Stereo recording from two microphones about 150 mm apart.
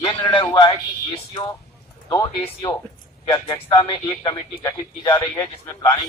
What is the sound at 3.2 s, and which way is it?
A man's voice, 30° left (ahead or behind).